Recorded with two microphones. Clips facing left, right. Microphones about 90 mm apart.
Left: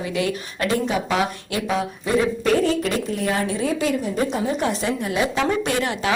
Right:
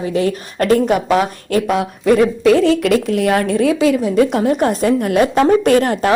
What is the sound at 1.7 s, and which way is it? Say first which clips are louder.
A woman's voice: right 6 dB; 65° right (ahead or behind).